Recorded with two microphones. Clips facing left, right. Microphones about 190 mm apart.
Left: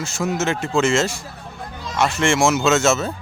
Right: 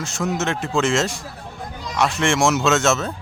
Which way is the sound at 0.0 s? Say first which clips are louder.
Left 1 dB; centre (ahead or behind).